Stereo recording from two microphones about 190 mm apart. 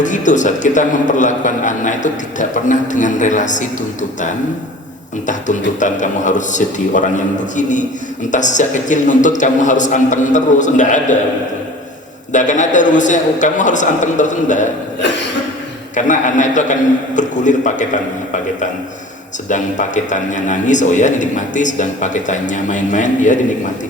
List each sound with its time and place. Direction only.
0.0 s a man's voice: 40° left (ahead or behind)
5.2 s a man's voice: 40° left (ahead or behind)
12.3 s a man's voice: 40° left (ahead or behind)
16.0 s a man's voice: 40° left (ahead or behind)
19.5 s a man's voice: 40° left (ahead or behind)